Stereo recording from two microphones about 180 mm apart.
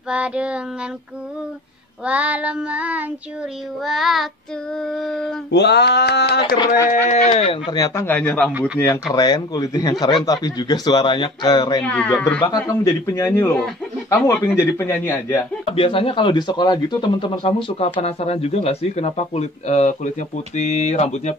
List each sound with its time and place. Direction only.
0.1 s child singing: 5° right (ahead or behind)
2.0 s child singing: 5° right (ahead or behind)
3.8 s speech: centre (ahead or behind)
5.5 s speech: 70° left (ahead or behind)
6.9 s speech: 40° left (ahead or behind); by 8.5 s 5° left (ahead or behind)
8.5 s child singing: 5° right (ahead or behind)
8.7 s speech: 15° left (ahead or behind)
11.8 s speech: 5° left (ahead or behind)
12.4 s speech: 20° left (ahead or behind)
15.3 s speech: 30° left (ahead or behind)